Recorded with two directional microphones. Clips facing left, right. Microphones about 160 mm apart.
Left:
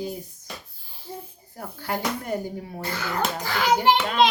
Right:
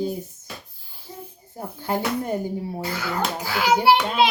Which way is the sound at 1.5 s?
20° right (ahead or behind).